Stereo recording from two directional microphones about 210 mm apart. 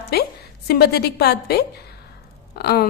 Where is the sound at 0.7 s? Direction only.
50° left (ahead or behind).